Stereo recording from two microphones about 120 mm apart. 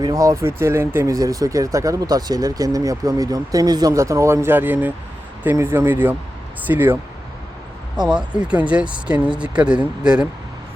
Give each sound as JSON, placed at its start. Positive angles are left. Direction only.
{"t": 0.0, "sound": "speech", "side_deg": -30}
{"t": 8.0, "sound": "speech", "side_deg": -10}